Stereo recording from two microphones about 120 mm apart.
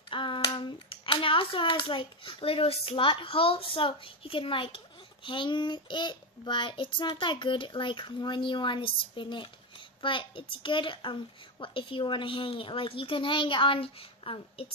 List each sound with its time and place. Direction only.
0.1 s a child's voice: 45° left (ahead or behind)